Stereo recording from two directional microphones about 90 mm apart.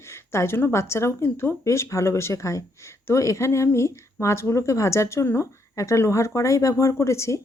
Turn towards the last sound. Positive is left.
turn(degrees=30)  # may be behind; listen again after turning